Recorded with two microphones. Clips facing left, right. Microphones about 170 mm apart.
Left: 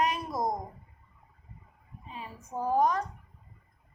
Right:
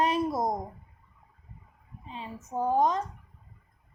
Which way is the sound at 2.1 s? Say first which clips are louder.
Right 3 dB; 25° right (ahead or behind).